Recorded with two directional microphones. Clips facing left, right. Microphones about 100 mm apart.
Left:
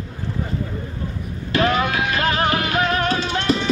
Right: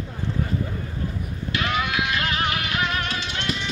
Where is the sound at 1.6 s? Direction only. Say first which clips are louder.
Left 6 dB; 35° left (ahead or behind).